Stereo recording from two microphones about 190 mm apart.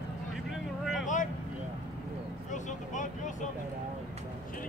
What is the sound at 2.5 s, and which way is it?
Vehicle, 40° left (ahead or behind).